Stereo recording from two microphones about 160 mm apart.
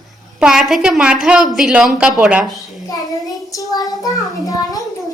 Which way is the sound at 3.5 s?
20° left (ahead or behind).